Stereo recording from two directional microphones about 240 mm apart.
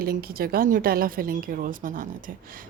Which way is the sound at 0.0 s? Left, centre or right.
Right.